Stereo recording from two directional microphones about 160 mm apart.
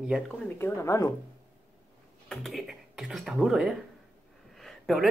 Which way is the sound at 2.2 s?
Centre (ahead or behind).